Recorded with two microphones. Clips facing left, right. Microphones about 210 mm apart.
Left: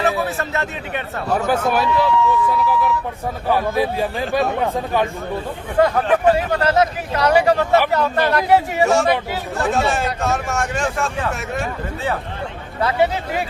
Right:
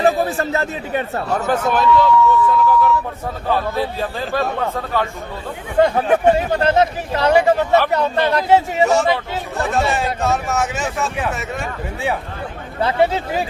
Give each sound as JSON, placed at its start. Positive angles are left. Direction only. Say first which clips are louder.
{"t": 0.0, "sound": "speech", "louder": "right 4 dB", "side_deg": -35}
{"t": 1.5, "sound": "speech", "louder": "right 3 dB", "side_deg": 10}
{"t": 5.8, "sound": "speech", "louder": "right 1 dB", "side_deg": -25}
{"t": 8.8, "sound": "speech", "louder": "even", "side_deg": 0}